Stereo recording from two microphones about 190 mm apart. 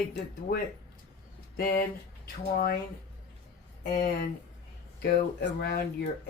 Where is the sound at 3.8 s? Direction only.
50° left (ahead or behind).